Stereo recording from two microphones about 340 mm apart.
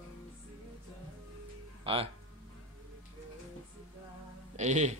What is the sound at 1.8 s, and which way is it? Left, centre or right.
Speech, centre.